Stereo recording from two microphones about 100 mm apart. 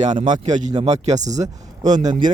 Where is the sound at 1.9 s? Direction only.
50° right (ahead or behind).